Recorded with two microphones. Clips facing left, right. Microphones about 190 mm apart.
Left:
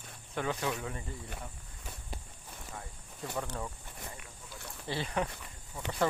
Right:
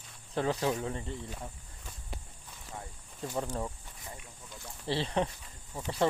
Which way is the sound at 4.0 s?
60° left (ahead or behind).